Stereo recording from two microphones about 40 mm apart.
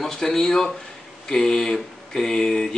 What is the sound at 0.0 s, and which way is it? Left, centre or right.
Speech, centre.